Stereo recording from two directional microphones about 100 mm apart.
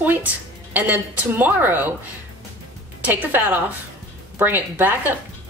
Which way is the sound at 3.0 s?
15° right (ahead or behind).